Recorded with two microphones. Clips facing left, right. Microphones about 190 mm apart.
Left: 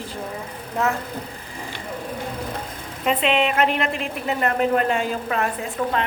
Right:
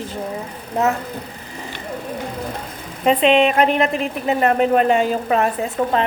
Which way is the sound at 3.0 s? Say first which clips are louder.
Right 6 dB; 30° right (ahead or behind).